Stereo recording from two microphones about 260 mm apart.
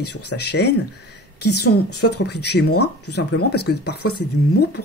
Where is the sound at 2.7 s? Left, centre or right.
Left.